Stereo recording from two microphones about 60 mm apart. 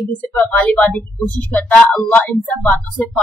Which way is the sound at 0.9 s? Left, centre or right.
Left.